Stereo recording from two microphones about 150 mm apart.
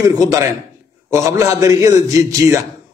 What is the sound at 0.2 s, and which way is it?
A man's voice, 20° right (ahead or behind).